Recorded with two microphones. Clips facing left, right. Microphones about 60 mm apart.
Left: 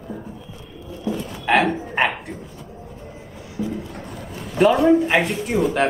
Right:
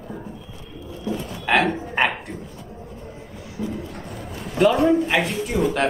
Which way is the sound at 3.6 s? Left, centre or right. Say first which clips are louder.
Left 2 dB; right.